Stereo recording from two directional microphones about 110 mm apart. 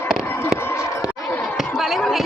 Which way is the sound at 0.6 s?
20° left (ahead or behind).